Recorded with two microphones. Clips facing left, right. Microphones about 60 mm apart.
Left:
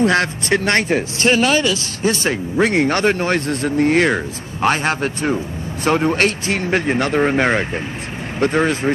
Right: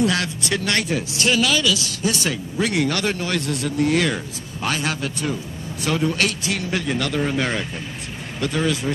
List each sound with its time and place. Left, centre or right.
0.0 s speech: left